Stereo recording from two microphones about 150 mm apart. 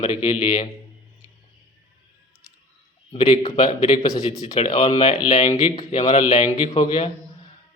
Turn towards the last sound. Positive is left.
turn(degrees=35)  # may be behind; listen again after turning